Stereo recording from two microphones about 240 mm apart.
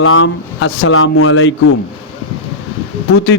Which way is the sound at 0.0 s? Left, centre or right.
Left.